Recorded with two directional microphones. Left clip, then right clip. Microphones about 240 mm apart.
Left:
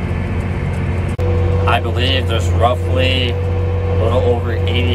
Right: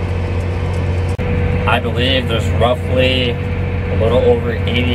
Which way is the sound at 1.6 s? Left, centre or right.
Centre.